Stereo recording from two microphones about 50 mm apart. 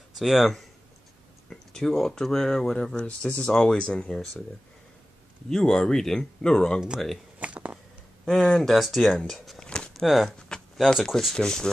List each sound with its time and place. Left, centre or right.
0.2 s speech: centre
1.5 s speech: centre
5.5 s speech: centre
7.3 s a sound: right
8.3 s speech: centre
9.7 s a sound: centre
10.0 s speech: centre